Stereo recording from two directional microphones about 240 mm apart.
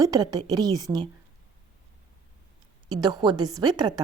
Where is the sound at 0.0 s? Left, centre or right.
Centre.